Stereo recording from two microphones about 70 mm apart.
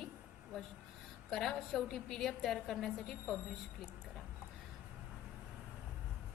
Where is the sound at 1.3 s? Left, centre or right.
Centre.